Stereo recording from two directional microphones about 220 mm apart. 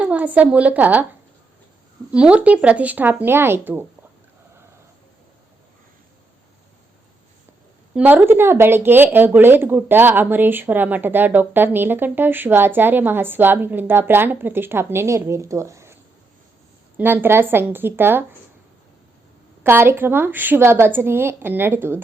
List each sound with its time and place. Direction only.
0.0 s a woman's voice: 5° right (ahead or behind)
2.1 s speech: 5° right (ahead or behind)
7.9 s speech: 10° right (ahead or behind)
17.0 s speech: 10° right (ahead or behind)
19.6 s speech: 10° right (ahead or behind)